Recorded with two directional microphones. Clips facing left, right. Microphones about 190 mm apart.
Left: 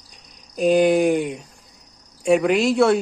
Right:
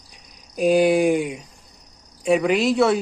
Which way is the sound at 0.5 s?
5° right (ahead or behind).